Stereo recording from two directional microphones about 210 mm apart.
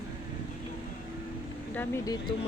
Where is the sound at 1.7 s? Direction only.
10° left (ahead or behind).